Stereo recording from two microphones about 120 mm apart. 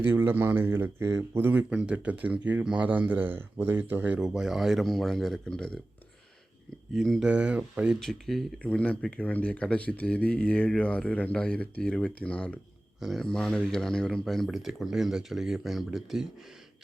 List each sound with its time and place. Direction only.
0.0 s speech: 20° right (ahead or behind)
4.2 s speech: centre (ahead or behind)
6.9 s speech: centre (ahead or behind)
7.3 s speech: 10° right (ahead or behind)
7.9 s speech: centre (ahead or behind)